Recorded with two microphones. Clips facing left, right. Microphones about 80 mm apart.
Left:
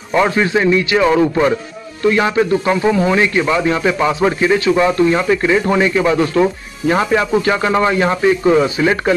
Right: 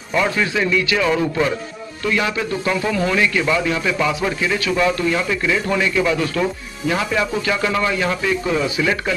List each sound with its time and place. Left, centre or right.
0.1 s a man's voice: left